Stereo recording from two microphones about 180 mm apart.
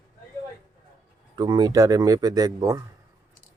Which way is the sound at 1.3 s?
20° right (ahead or behind).